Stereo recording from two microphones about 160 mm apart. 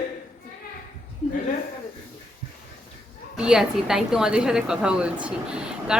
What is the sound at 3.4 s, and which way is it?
A woman's voice, 5° right (ahead or behind).